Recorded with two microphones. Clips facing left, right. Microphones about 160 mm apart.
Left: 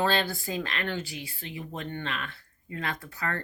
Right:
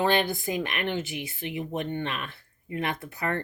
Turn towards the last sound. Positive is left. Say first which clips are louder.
# right 3 dB
turn(degrees=-20)  # may be behind; listen again after turning